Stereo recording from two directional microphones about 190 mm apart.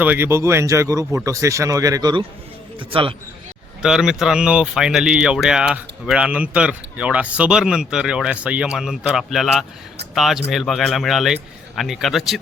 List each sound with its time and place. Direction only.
0.0 s speech: 10° right (ahead or behind); by 3.2 s 25° right (ahead or behind)
3.8 s speech: 5° right (ahead or behind)